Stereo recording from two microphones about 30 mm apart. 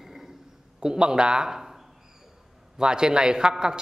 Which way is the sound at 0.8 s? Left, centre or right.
Right.